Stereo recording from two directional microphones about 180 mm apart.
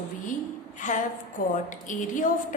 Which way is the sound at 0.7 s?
45° left (ahead or behind).